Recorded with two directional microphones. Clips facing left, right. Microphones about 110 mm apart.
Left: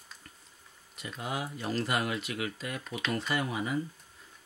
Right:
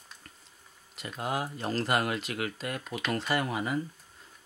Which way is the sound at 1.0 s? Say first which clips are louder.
Right 3 dB; 40° right (ahead or behind).